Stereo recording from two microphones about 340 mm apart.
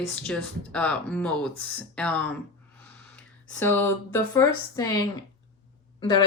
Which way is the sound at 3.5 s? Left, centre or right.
Centre.